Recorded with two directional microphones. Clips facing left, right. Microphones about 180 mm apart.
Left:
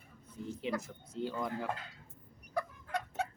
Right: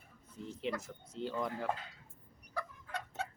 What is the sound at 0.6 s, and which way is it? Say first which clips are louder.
Speech: left 1 dB; centre (ahead or behind).